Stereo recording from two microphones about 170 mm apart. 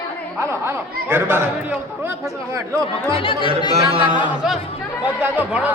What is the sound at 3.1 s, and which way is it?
Speech, 30° left (ahead or behind).